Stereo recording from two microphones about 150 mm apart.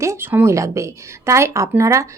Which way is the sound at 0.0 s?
15° right (ahead or behind).